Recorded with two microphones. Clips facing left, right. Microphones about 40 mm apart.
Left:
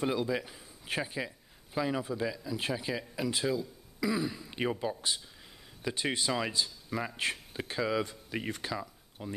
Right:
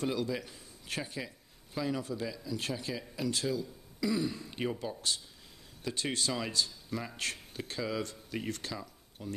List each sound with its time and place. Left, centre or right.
0.0 s a man's voice: centre